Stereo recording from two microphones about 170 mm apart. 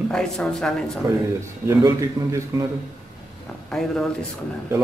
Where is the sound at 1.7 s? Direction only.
20° right (ahead or behind).